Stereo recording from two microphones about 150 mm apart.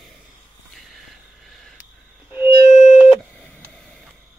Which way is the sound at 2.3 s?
50° left (ahead or behind).